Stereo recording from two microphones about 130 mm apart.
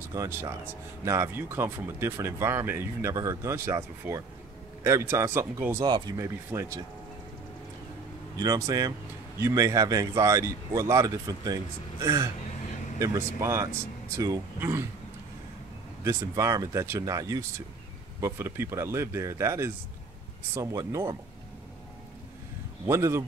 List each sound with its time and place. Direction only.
0.1 s speech: 25° right (ahead or behind)
5.9 s speech: 30° right (ahead or behind)
8.4 s speech: 25° right (ahead or behind)
16.0 s speech: 20° right (ahead or behind)
22.8 s speech: 20° right (ahead or behind)